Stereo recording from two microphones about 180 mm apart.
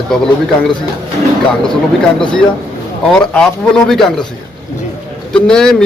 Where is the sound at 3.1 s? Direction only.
5° left (ahead or behind).